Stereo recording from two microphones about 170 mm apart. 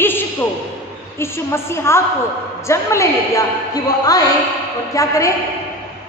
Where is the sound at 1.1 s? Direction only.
15° left (ahead or behind).